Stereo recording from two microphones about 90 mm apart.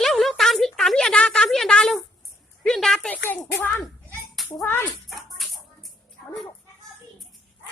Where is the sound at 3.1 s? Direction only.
20° left (ahead or behind).